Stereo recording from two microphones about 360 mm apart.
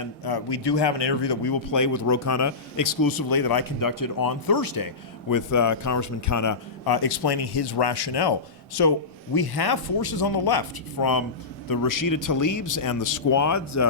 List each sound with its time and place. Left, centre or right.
0.0 s speech: left
1.7 s speech: left
5.3 s a man's voice: left
6.8 s speech: left